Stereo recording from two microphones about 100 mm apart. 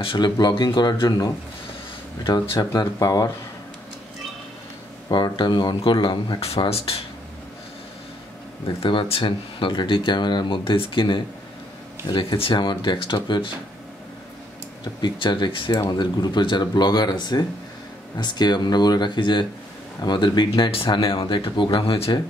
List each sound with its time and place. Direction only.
0.0 s speech: 55° left (ahead or behind)
2.5 s speech: 35° left (ahead or behind)
5.1 s speech: 50° left (ahead or behind)
6.6 s speech: 70° left (ahead or behind)
8.8 s speech: 60° left (ahead or behind)
15.0 s speech: 50° left (ahead or behind)